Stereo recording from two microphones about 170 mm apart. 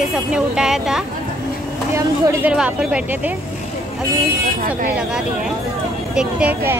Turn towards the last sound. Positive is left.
turn(degrees=-10)  # may be behind; listen again after turning